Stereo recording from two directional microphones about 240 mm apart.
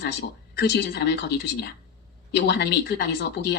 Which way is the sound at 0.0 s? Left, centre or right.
Left.